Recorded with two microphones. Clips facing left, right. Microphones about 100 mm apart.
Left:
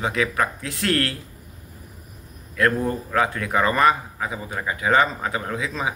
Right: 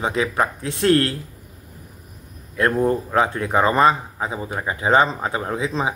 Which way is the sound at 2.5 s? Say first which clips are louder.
Right 3 dB; 25° right (ahead or behind).